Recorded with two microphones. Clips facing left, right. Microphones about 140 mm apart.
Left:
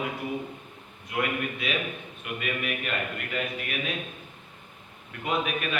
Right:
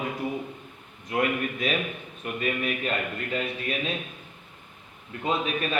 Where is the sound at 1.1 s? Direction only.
40° right (ahead or behind).